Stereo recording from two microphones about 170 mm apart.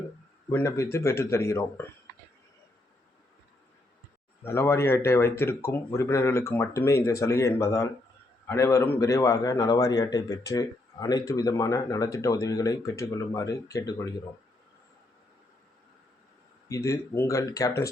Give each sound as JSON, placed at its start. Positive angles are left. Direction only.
{"t": 0.5, "sound": "speech", "side_deg": 15}
{"t": 4.4, "sound": "speech", "side_deg": 15}
{"t": 16.6, "sound": "speech", "side_deg": 20}